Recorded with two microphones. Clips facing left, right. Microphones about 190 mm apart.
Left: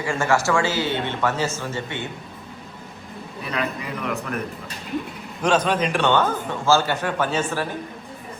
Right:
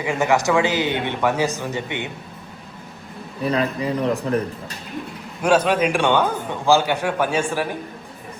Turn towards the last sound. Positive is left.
turn(degrees=-10)  # may be behind; listen again after turning